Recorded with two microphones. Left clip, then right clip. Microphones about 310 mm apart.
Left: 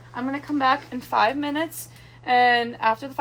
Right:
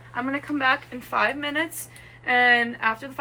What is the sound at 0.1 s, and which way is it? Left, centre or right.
A woman's voice, centre.